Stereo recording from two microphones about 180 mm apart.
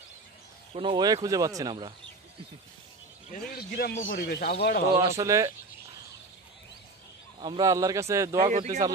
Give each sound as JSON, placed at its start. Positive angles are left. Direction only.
{"t": 0.7, "sound": "speech", "side_deg": -25}
{"t": 3.3, "sound": "a man's voice", "side_deg": 55}
{"t": 4.9, "sound": "speech", "side_deg": -15}
{"t": 7.3, "sound": "speech", "side_deg": -25}
{"t": 8.5, "sound": "speech", "side_deg": -35}